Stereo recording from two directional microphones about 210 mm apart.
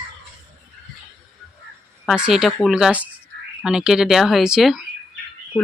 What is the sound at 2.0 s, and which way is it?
Speech, 5° right (ahead or behind).